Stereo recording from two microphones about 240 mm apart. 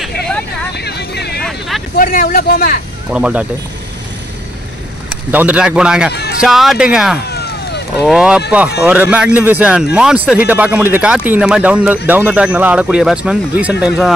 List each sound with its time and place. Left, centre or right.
0.7 s a sound: left
2.0 s speech: left
3.1 s speech: centre
5.1 s speech: centre
7.2 s vehicle: left
8.0 s speech: centre